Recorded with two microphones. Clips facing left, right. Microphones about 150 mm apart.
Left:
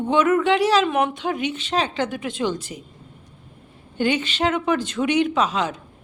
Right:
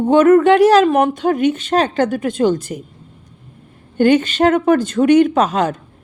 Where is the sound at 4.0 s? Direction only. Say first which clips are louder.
Right 9 dB; 45° right (ahead or behind).